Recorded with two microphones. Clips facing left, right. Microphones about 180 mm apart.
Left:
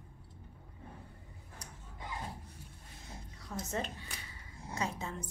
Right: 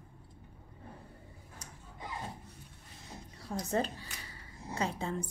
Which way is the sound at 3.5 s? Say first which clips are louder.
Right 4 dB; 30° right (ahead or behind).